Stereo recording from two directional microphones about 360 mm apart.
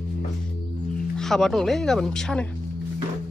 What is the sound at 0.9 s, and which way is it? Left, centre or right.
Speech, centre.